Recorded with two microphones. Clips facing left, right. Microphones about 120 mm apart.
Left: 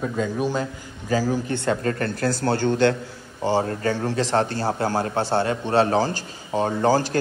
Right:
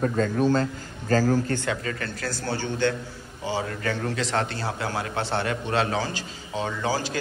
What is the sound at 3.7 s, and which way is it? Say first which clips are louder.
A man's voice: left 4 dB; 30° left (ahead or behind).